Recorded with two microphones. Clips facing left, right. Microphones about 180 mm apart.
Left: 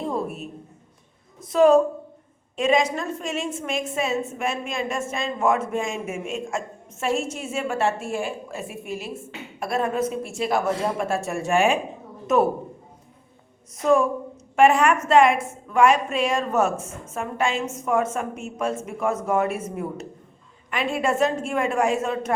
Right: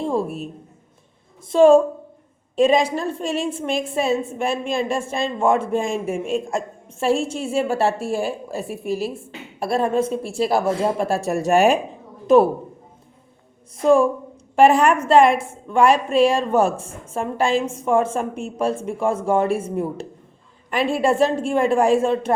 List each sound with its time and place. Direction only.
0.0 s a sound: 30° right (ahead or behind)
1.4 s a woman's voice: 30° right (ahead or behind)
13.7 s a woman's voice: 30° right (ahead or behind)